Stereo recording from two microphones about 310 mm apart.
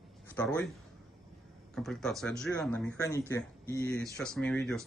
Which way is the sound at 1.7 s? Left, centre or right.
Centre.